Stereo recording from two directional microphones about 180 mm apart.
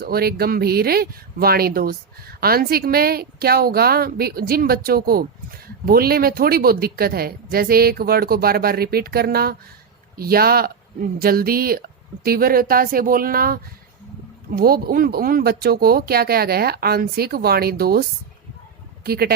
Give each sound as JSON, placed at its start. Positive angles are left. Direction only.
{"t": 0.0, "sound": "speech", "side_deg": -60}
{"t": 19.0, "sound": "speech", "side_deg": -60}